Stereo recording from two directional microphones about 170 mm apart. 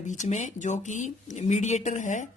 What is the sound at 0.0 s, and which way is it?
Speech, 45° left (ahead or behind).